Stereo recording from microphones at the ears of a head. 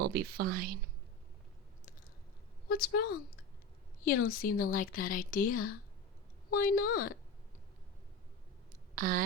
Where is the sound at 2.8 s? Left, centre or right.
Left.